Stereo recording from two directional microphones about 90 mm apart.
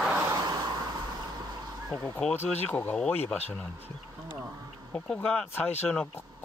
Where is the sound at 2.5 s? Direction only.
20° left (ahead or behind).